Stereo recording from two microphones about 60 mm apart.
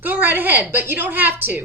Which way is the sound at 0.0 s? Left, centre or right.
Right.